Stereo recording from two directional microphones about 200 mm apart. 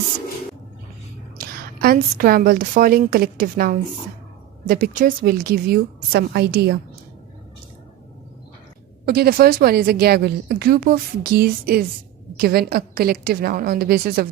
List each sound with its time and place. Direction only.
1.4 s a woman's voice: 50° right (ahead or behind)
9.0 s a woman's voice: 50° right (ahead or behind)